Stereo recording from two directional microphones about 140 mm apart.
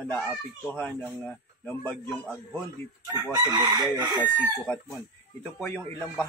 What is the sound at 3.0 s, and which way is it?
Chicken, 30° right (ahead or behind).